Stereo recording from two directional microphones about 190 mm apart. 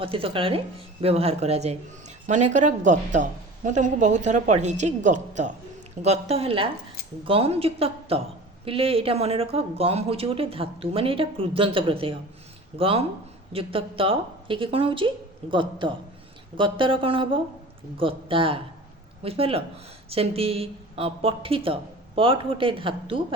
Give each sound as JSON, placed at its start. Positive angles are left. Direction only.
{"t": 0.0, "sound": "a woman's voice", "side_deg": -30}